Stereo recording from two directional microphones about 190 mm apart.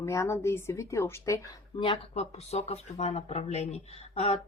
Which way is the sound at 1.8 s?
30° left (ahead or behind).